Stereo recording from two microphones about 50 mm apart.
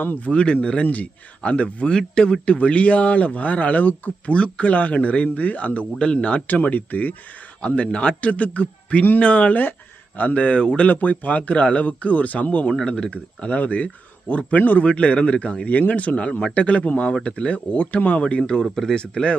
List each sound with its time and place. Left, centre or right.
0.0 s speech: left
0.3 s a man's voice: left
4.4 s a man's voice: left
6.5 s speech: left
7.8 s a man's voice: left
10.8 s a man's voice: left
12.7 s a man's voice: centre
18.6 s speech: centre